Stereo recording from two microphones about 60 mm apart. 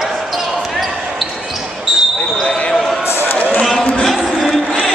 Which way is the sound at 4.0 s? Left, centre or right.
Centre.